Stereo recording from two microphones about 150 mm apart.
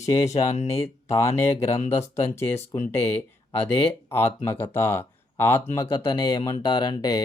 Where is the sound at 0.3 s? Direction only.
50° left (ahead or behind).